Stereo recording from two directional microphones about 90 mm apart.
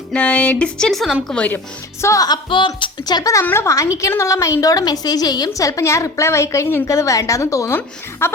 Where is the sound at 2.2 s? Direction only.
55° left (ahead or behind).